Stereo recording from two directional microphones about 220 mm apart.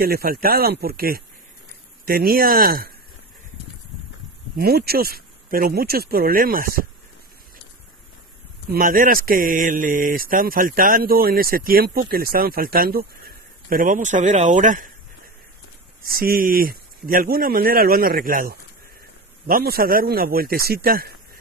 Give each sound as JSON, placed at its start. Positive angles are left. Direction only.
{"t": 0.0, "sound": "speech", "side_deg": -45}
{"t": 4.6, "sound": "speech", "side_deg": -45}
{"t": 8.6, "sound": "speech", "side_deg": -40}
{"t": 16.0, "sound": "speech", "side_deg": -40}